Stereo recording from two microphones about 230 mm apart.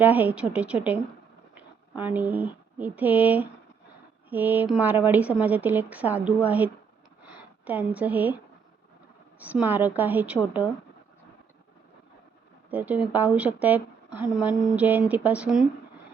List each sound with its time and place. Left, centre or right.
0.0 s a woman's voice: centre
2.0 s a woman's voice: centre
9.4 s speech: centre
12.7 s speech: centre